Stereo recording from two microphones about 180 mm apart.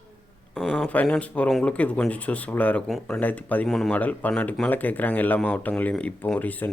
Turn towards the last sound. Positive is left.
turn(degrees=10)  # may be behind; listen again after turning